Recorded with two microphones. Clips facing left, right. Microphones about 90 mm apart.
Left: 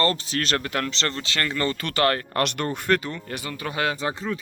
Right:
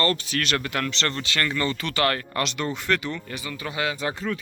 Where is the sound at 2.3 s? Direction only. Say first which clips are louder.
Left 2 dB; 55° left (ahead or behind).